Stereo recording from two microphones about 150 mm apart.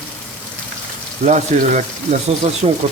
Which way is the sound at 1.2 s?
50° right (ahead or behind).